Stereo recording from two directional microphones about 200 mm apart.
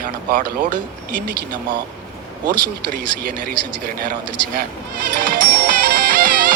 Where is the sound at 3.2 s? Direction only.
45° right (ahead or behind).